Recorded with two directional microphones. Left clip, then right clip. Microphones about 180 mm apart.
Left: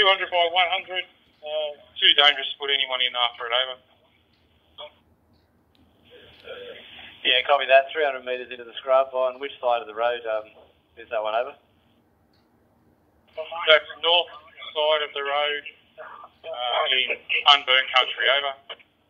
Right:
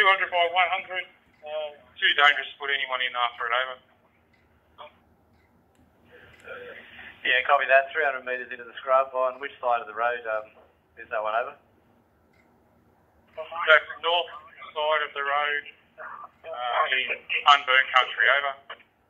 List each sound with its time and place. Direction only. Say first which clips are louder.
0.0 s speech: left 1 dB; 35° left (ahead or behind)
6.1 s speech: left 2 dB; 40° left (ahead or behind)
13.3 s speech: left 1 dB; 40° left (ahead or behind)